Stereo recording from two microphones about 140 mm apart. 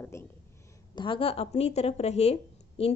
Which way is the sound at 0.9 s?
35° left (ahead or behind).